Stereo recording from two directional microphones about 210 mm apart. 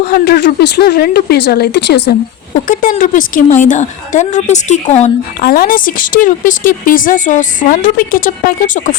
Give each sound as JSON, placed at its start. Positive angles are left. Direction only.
{"t": 0.0, "sound": "speech", "side_deg": 50}
{"t": 2.6, "sound": "speech", "side_deg": 40}